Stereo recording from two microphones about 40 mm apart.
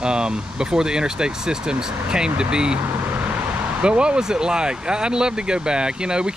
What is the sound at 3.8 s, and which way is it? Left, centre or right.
Speech, right.